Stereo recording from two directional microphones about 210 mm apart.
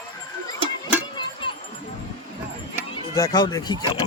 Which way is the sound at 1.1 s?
25° left (ahead or behind).